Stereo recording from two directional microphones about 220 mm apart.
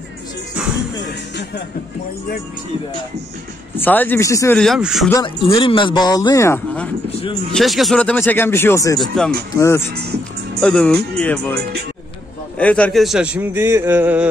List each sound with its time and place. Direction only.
3.7 s speech: 10° left (ahead or behind)
4.6 s a man's voice: centre (ahead or behind)
5.1 s speech: 20° left (ahead or behind)
7.1 s a sound: 25° left (ahead or behind)
7.5 s speech: centre (ahead or behind)
9.0 s a man's voice: 5° left (ahead or behind)
12.5 s a man's voice: 5° left (ahead or behind)